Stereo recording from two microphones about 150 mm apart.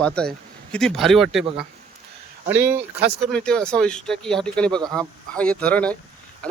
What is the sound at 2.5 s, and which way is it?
Speech, 15° right (ahead or behind).